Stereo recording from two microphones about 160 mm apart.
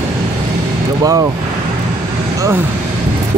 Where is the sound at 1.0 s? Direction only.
20° right (ahead or behind).